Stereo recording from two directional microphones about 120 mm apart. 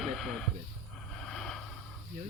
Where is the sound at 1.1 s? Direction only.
5° left (ahead or behind).